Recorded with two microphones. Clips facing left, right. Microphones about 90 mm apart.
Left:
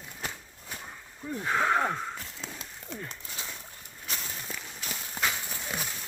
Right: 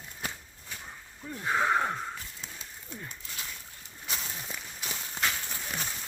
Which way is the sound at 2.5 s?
90° left.